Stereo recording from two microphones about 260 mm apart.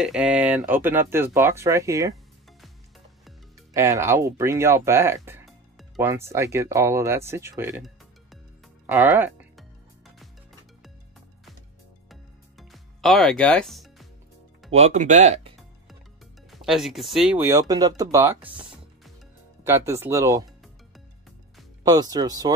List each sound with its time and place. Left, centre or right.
0.0 s speech: centre
3.7 s speech: centre
8.8 s music: centre
12.1 s music: centre
14.7 s speech: right
16.4 s speech: centre
20.4 s music: centre
21.8 s speech: centre